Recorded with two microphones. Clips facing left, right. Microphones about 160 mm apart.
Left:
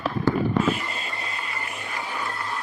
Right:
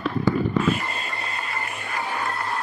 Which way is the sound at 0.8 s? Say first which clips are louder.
Right 2 dB; 45° right (ahead or behind).